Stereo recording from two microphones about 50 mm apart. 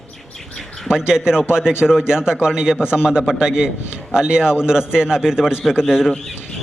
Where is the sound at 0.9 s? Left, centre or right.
Centre.